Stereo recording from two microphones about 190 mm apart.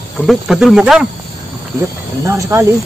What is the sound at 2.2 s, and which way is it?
Speech, 15° right (ahead or behind).